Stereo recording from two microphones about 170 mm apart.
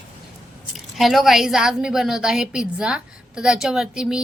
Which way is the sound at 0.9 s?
Centre (ahead or behind).